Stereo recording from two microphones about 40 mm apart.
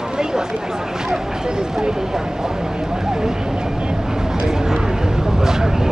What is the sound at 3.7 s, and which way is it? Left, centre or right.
Vehicle, centre.